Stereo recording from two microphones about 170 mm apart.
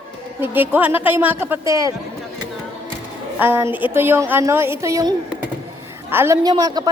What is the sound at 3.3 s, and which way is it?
A woman's voice, 10° right (ahead or behind).